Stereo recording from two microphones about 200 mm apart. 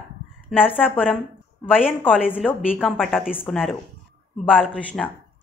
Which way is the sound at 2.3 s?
Centre (ahead or behind).